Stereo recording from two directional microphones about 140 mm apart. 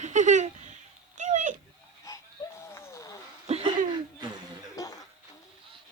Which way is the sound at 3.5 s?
50° right (ahead or behind).